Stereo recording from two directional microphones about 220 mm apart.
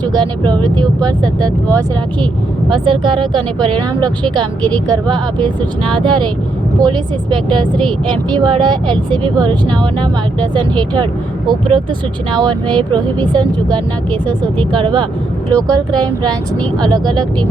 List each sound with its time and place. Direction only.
0.1 s speech: 20° right (ahead or behind)
2.7 s speech: 20° right (ahead or behind)